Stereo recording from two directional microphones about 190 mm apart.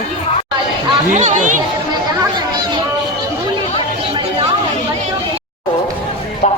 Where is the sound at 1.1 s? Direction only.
40° right (ahead or behind).